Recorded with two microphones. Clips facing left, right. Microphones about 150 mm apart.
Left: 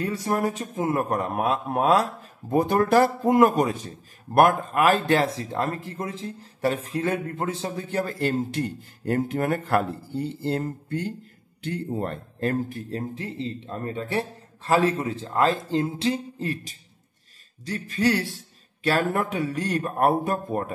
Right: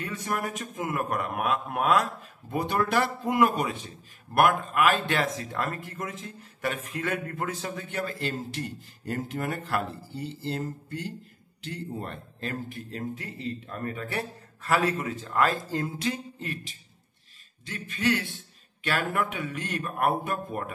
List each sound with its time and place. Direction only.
0.0 s a man's voice: 35° left (ahead or behind)
2.5 s a man's voice: 40° left (ahead or behind)
12.9 s a man's voice: 30° left (ahead or behind)